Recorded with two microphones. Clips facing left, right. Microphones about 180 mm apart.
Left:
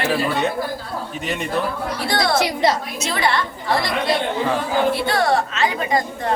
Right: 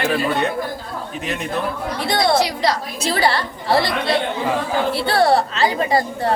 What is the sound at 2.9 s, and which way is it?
Speech, 35° right (ahead or behind).